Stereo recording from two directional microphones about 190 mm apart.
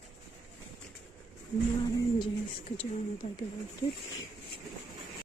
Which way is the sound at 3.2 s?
35° left (ahead or behind).